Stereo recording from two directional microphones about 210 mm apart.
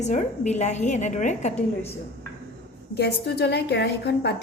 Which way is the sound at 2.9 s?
50° left (ahead or behind).